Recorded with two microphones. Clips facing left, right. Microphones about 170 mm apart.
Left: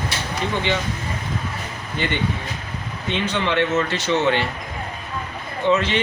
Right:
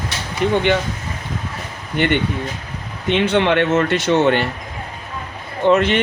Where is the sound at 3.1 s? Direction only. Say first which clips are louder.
Right 7 dB; 60° right (ahead or behind).